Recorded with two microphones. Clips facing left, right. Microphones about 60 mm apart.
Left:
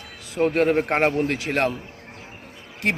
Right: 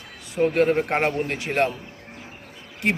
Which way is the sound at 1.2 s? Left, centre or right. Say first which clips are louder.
Even; left.